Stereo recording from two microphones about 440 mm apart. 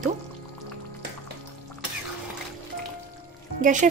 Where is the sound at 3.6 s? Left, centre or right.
Centre.